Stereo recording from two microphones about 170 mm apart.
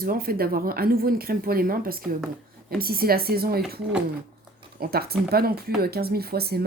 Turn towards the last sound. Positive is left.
turn(degrees=-65)  # may be behind; listen again after turning